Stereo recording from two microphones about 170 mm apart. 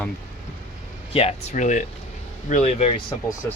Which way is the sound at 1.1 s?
35° left (ahead or behind).